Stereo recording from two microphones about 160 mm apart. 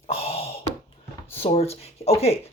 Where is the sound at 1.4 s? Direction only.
40° left (ahead or behind).